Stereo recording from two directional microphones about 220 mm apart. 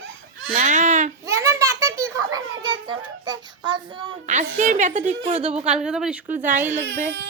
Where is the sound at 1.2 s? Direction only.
15° right (ahead or behind).